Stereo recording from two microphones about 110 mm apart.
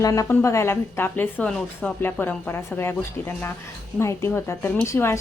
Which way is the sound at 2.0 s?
20° left (ahead or behind).